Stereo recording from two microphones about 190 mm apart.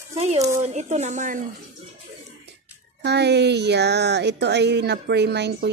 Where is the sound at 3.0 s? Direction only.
60° right (ahead or behind).